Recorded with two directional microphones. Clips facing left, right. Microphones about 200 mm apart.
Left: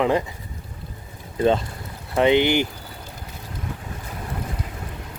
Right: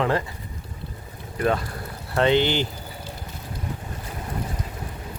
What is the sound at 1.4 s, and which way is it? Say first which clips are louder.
Speech: left 4 dB; 25° left (ahead or behind).